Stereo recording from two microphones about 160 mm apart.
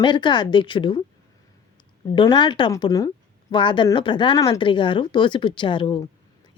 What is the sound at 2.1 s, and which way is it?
A woman's voice, 25° left (ahead or behind).